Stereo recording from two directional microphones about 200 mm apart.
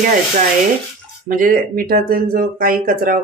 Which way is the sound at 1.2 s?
45° right (ahead or behind).